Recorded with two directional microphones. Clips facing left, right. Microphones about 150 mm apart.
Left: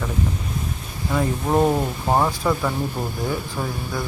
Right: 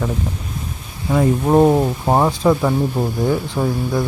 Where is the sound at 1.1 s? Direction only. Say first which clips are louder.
Right 6 dB; 25° right (ahead or behind).